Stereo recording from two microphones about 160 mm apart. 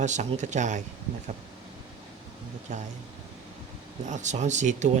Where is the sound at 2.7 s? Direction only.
50° right (ahead or behind).